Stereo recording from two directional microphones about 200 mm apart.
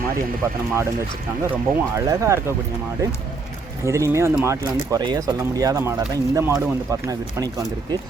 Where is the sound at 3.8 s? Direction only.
15° right (ahead or behind).